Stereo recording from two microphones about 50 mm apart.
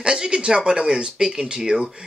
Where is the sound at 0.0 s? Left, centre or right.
Centre.